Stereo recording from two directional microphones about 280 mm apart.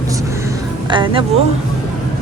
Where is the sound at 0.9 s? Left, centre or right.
Centre.